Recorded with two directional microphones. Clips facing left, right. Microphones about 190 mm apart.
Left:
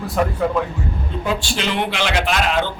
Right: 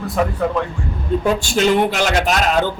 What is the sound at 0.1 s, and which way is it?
Speech, centre (ahead or behind).